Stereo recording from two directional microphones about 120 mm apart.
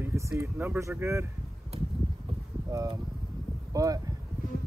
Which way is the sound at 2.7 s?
25° right (ahead or behind).